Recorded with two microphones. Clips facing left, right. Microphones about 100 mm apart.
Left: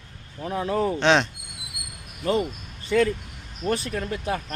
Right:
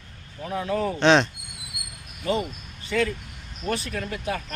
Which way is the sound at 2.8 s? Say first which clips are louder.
Left 4 dB; 35° left (ahead or behind).